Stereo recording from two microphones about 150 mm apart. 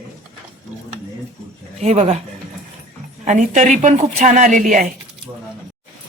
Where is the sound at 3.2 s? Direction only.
55° right (ahead or behind).